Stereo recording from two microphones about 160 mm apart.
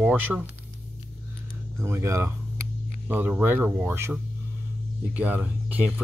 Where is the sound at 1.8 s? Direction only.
15° right (ahead or behind).